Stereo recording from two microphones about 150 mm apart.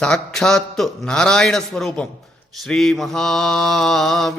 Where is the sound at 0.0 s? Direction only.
5° left (ahead or behind).